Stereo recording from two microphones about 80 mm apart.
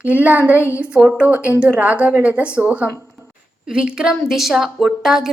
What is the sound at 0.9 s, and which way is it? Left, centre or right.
A woman's voice, centre.